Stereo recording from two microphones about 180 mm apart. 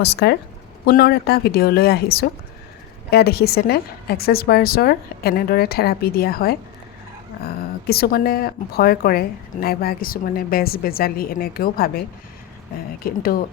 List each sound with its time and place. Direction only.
0.0 s speech: 65° left (ahead or behind)
13.1 s speech: 55° left (ahead or behind)